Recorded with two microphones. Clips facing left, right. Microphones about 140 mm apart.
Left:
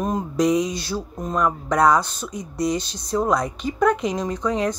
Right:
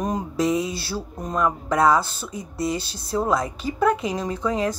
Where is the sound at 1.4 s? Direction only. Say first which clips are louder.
Left 1 dB; 25° right (ahead or behind).